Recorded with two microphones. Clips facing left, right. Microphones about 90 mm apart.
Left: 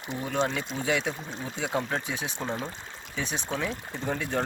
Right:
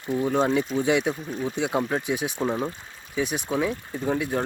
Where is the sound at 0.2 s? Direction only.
15° right (ahead or behind).